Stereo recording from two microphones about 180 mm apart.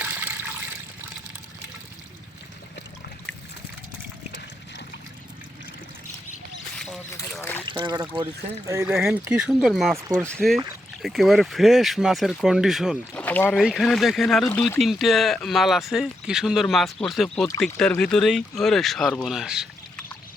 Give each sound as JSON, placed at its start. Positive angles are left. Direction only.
{"t": 0.0, "sound": "toilet flush", "side_deg": -10}
{"t": 6.7, "sound": "a sound", "side_deg": 5}
{"t": 7.7, "sound": "speech", "side_deg": -25}
{"t": 8.9, "sound": "speech", "side_deg": -5}
{"t": 10.0, "sound": "speech", "side_deg": -15}
{"t": 10.2, "sound": "speech", "side_deg": 5}
{"t": 13.2, "sound": "rowboat", "side_deg": 10}
{"t": 13.5, "sound": "speech", "side_deg": 0}